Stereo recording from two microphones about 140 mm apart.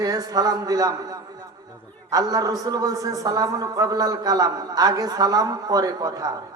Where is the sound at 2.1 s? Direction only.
25° right (ahead or behind).